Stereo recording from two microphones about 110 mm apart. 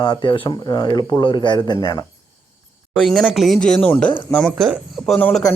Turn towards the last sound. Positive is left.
turn(degrees=10)  # may be behind; listen again after turning